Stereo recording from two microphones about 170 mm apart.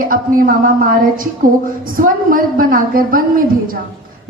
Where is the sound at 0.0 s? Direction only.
55° right (ahead or behind).